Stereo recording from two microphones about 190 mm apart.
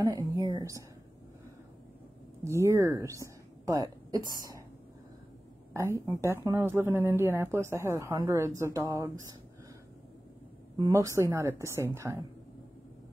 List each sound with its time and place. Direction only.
0.0 s speech: 20° right (ahead or behind)
2.4 s a woman's voice: 15° right (ahead or behind)
5.7 s speech: 15° right (ahead or behind)
10.8 s speech: 15° right (ahead or behind)